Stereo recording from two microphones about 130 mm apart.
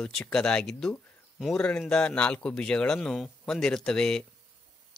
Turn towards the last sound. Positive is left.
turn(degrees=5)  # may be behind; listen again after turning